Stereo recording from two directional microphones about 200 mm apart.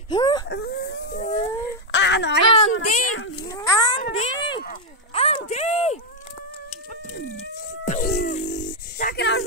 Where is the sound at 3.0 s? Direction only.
80° left.